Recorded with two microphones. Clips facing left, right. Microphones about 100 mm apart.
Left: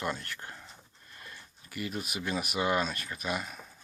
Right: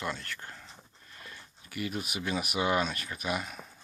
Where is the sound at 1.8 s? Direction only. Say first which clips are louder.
Right 1 dB; centre (ahead or behind).